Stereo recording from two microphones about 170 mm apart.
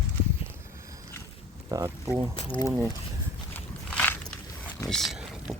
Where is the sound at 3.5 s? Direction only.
10° left (ahead or behind).